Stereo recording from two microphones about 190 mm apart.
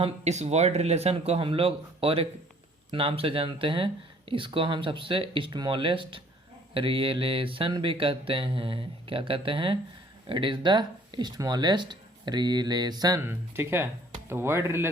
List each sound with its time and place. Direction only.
0.0 s speech: 35° right (ahead or behind); by 14.8 s 15° right (ahead or behind)